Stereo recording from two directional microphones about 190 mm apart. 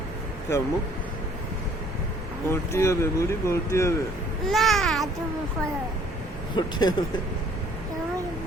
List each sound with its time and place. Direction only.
2.5 s speech: 15° left (ahead or behind)
4.4 s babbling: centre (ahead or behind)
6.6 s speech: 20° left (ahead or behind)